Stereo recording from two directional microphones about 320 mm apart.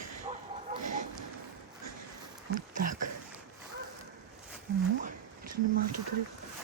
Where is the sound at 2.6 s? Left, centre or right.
Right.